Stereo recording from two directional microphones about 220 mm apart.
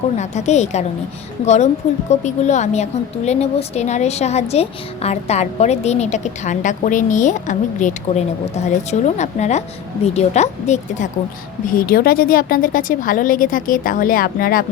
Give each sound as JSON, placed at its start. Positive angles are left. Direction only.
{"t": 0.2, "sound": "a woman's voice", "side_deg": 30}